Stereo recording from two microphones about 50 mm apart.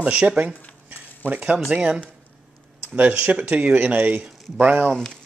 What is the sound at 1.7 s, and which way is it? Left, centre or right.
Speech, centre.